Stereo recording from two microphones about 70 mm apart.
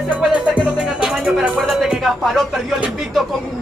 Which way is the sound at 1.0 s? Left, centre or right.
Centre.